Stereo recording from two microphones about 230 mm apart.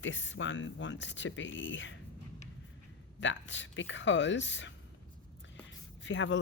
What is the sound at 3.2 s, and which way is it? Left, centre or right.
A man's voice, left.